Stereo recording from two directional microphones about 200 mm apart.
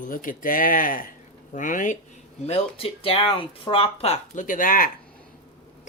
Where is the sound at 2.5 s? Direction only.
30° left (ahead or behind).